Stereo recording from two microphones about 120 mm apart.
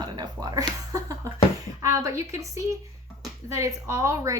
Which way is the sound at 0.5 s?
25° right (ahead or behind).